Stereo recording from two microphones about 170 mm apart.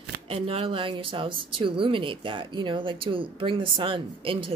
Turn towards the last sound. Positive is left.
turn(degrees=-30)  # may be behind; listen again after turning